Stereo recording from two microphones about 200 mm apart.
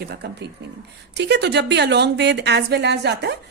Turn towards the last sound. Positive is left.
turn(degrees=-55)  # may be behind; listen again after turning